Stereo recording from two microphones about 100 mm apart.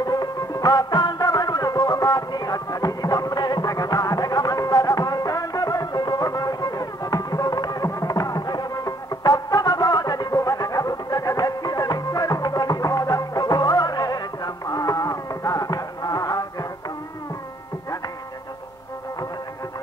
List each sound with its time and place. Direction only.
0.0 s music: 40° left (ahead or behind)